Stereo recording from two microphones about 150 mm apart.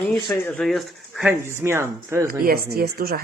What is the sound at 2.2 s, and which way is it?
Speech, 85° right.